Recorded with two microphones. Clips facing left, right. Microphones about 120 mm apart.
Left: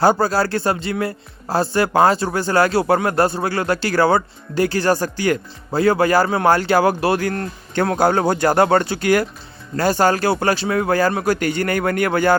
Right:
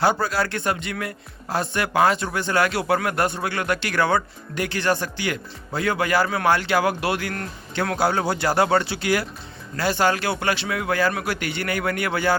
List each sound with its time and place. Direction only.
0.0 s speech: 40° left (ahead or behind)
7.9 s speech: 50° left (ahead or behind)